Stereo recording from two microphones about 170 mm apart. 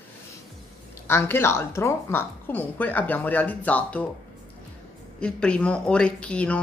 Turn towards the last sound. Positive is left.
turn(degrees=5)  # may be behind; listen again after turning